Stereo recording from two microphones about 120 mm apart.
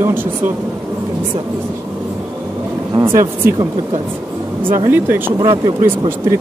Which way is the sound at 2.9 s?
45° right (ahead or behind).